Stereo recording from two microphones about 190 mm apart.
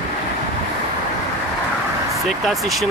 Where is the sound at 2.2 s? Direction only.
Centre (ahead or behind).